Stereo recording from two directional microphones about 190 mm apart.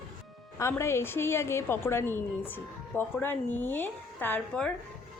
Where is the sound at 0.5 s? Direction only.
15° left (ahead or behind).